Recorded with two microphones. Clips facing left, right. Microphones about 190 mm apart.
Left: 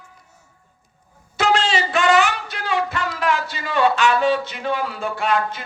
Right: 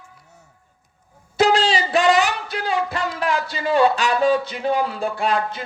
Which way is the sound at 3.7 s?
35° right (ahead or behind).